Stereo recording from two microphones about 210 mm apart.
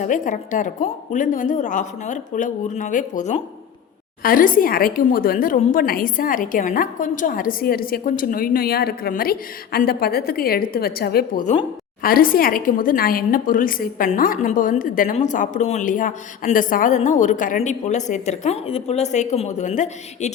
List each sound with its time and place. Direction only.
0.0 s a woman's voice: 35° left (ahead or behind)